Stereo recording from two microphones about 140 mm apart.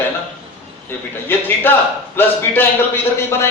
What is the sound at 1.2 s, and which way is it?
A man's voice, 15° left (ahead or behind).